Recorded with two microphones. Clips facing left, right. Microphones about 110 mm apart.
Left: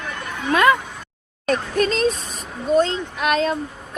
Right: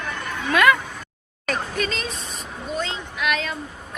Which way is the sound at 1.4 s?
40° left (ahead or behind).